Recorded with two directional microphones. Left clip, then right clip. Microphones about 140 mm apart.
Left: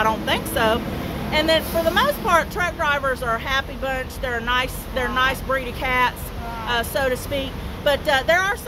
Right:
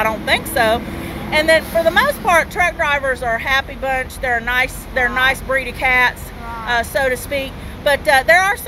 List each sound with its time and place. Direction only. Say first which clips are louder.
0.0 s speech: right 4 dB; 5° left (ahead or behind)